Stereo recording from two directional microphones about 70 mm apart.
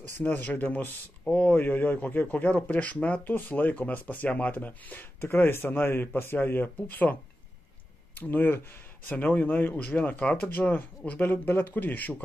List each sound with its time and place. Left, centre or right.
0.2 s speech: left
8.2 s speech: left